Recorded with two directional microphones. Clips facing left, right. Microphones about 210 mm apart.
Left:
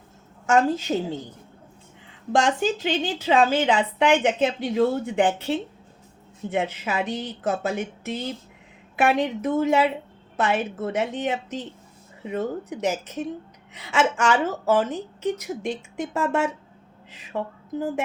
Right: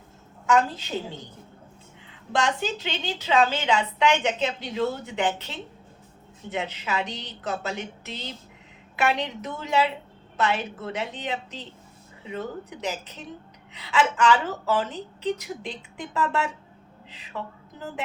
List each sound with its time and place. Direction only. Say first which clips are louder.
0.4 s a woman's voice: left 3 dB; 45° left (ahead or behind)
2.3 s a woman's voice: left 5 dB; 45° left (ahead or behind)